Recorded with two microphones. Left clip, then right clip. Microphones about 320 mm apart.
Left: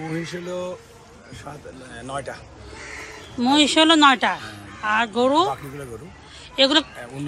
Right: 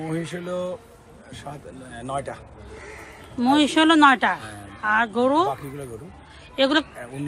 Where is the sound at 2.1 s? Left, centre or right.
Right.